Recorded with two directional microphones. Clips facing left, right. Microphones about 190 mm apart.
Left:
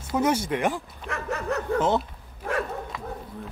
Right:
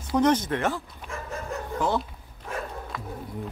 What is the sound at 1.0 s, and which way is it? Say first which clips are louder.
Dog: left 9 dB; 70° left (ahead or behind).